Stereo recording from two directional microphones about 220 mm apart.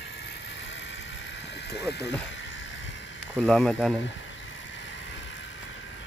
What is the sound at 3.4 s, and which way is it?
Speech, 5° left (ahead or behind).